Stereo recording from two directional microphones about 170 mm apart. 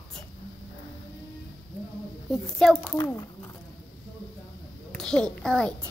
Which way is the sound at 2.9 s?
25° left (ahead or behind).